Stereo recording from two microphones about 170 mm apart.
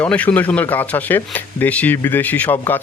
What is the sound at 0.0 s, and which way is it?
Speech, 10° left (ahead or behind).